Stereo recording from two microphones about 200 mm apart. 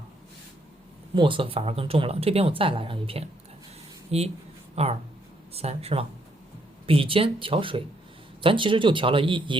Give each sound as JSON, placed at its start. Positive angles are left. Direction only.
{"t": 1.1, "sound": "speech", "side_deg": -25}